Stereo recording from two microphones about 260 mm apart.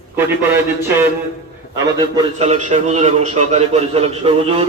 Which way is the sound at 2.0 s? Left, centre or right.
Centre.